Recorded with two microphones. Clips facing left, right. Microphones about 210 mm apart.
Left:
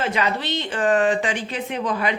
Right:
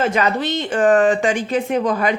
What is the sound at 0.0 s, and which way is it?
Speech, 45° right (ahead or behind).